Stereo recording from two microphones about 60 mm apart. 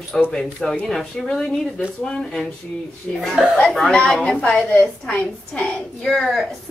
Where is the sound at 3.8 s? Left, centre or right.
Centre.